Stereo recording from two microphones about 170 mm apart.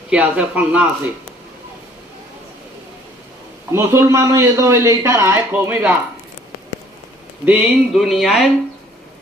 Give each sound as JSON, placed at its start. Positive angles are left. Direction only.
{"t": 0.1, "sound": "a man's voice", "side_deg": -5}
{"t": 3.7, "sound": "a man's voice", "side_deg": -15}
{"t": 7.4, "sound": "speech", "side_deg": -5}